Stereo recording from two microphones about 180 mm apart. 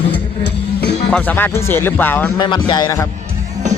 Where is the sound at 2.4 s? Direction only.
25° left (ahead or behind).